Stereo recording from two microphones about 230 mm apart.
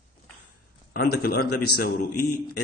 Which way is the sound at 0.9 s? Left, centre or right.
Left.